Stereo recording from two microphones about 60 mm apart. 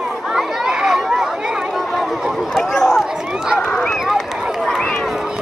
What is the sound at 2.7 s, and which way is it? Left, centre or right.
Run, centre.